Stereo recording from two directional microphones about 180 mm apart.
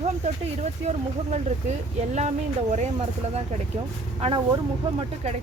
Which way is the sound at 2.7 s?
40° right (ahead or behind).